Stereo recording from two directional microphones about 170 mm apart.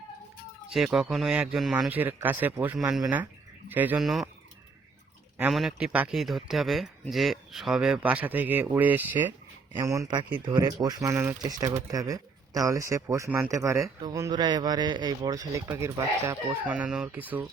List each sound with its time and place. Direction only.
0.9 s speech: centre (ahead or behind)
5.4 s speech: centre (ahead or behind)